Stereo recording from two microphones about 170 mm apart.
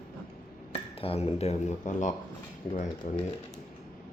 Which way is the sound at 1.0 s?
35° left (ahead or behind).